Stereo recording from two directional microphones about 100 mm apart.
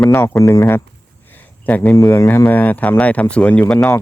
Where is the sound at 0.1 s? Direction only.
30° left (ahead or behind).